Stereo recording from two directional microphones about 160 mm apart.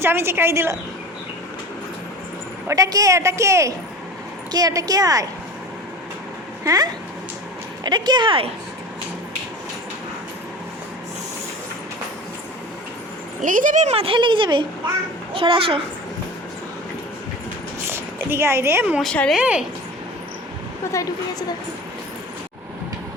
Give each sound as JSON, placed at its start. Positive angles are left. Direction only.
{"t": 0.0, "sound": "a woman's voice", "side_deg": -15}
{"t": 2.6, "sound": "a woman's voice", "side_deg": -20}
{"t": 7.9, "sound": "a woman's voice", "side_deg": -25}
{"t": 13.4, "sound": "a child's voice", "side_deg": -55}
{"t": 17.8, "sound": "speech", "side_deg": -15}
{"t": 19.0, "sound": "speech", "side_deg": 5}
{"t": 19.4, "sound": "a woman's voice", "side_deg": -5}
{"t": 20.9, "sound": "a woman's voice", "side_deg": 20}